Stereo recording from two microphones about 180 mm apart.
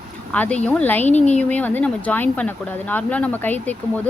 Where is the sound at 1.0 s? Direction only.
40° left (ahead or behind).